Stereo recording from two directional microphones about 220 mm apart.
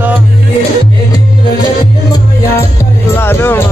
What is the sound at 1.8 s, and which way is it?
Music, 15° left (ahead or behind).